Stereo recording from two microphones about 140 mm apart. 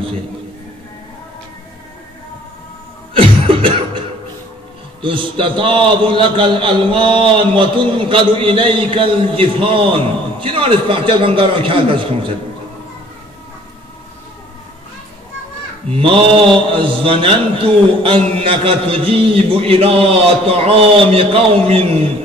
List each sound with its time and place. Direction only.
3.2 s cough: 40° right (ahead or behind)
5.0 s a man's voice: 40° right (ahead or behind)
15.9 s a man's voice: 40° right (ahead or behind)